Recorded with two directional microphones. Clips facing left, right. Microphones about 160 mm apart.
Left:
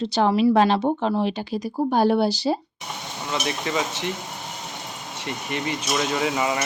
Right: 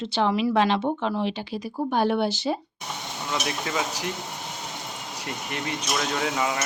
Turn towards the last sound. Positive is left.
turn(degrees=5)  # may be behind; listen again after turning